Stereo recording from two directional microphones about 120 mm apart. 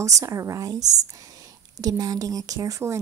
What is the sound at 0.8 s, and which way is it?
Speech, 70° right (ahead or behind).